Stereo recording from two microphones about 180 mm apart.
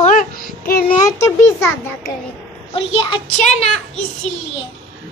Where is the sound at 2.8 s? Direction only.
30° left (ahead or behind).